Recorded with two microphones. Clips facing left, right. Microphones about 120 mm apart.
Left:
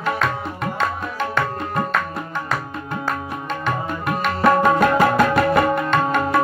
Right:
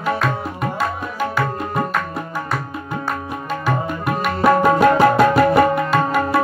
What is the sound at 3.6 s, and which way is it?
Music, 5° right (ahead or behind).